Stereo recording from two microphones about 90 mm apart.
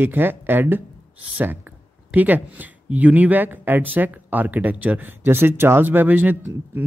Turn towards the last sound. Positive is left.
turn(degrees=-20)  # may be behind; listen again after turning